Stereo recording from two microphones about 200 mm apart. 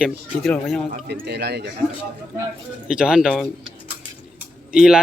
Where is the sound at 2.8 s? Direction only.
5° right (ahead or behind).